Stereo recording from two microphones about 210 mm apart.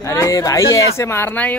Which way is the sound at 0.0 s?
15° left (ahead or behind).